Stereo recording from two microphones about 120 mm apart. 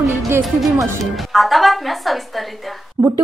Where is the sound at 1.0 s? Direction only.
Centre (ahead or behind).